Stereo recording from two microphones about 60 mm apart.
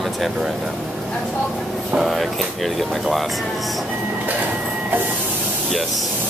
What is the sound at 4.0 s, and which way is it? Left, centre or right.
Printer, right.